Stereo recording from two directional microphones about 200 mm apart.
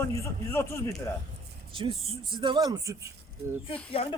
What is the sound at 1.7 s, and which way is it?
Speech, 25° right (ahead or behind).